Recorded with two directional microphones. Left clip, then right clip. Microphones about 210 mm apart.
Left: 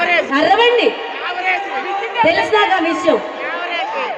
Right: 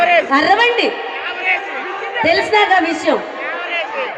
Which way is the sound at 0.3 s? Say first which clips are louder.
Even; 50° right (ahead or behind).